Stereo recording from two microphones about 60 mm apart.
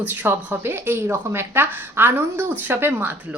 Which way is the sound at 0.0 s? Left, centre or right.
Right.